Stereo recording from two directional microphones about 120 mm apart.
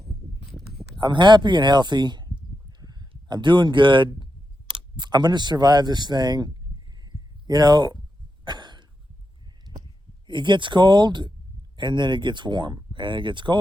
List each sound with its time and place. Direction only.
0.9 s speech: 40° right (ahead or behind)
4.7 s a sound: 40° right (ahead or behind)
8.4 s cough: 35° right (ahead or behind)
10.2 s speech: 40° right (ahead or behind)